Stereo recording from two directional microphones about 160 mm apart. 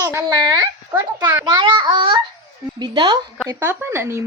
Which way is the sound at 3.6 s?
15° right (ahead or behind).